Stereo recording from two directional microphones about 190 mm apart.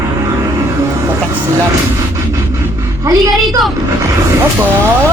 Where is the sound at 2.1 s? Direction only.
15° right (ahead or behind).